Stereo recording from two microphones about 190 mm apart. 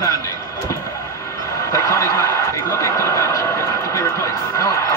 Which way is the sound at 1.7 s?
15° left (ahead or behind).